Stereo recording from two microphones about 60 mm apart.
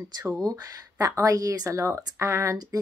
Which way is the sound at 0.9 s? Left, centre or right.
Right.